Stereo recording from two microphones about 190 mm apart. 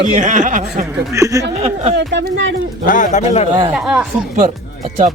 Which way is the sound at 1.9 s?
65° right (ahead or behind).